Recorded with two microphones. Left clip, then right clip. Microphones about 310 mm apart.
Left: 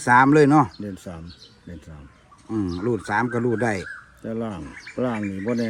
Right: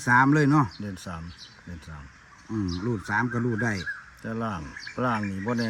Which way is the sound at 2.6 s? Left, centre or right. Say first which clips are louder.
Left 6 dB; centre.